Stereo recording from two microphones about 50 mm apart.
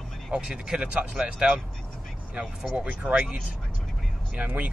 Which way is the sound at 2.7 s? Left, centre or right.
Right.